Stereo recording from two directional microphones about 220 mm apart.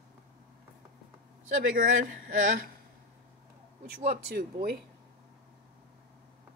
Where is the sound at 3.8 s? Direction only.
45° right (ahead or behind).